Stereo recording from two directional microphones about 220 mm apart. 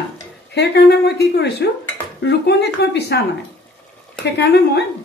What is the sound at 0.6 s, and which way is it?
Speech, 50° left (ahead or behind).